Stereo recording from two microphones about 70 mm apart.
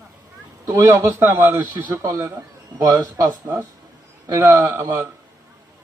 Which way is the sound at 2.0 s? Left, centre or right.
Right.